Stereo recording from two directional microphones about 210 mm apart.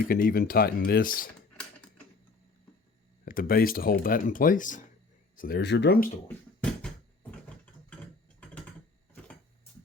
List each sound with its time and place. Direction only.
0.1 s speech: 45° left (ahead or behind)
3.2 s speech: 45° left (ahead or behind)
5.4 s speech: 50° left (ahead or behind)
6.2 s a sound: 5° left (ahead or behind)